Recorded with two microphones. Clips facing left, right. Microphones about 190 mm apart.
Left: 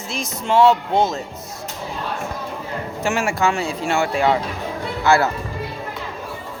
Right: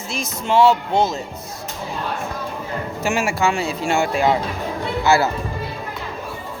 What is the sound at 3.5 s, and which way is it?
Speech, 20° right (ahead or behind).